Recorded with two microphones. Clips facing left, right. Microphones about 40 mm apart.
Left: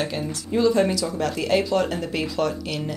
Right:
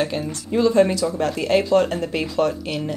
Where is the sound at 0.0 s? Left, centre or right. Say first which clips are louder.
Right 3 dB; centre.